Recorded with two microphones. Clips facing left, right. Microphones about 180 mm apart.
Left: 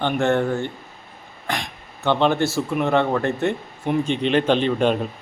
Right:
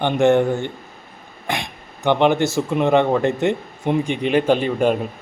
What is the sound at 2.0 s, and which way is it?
Speech, 15° right (ahead or behind).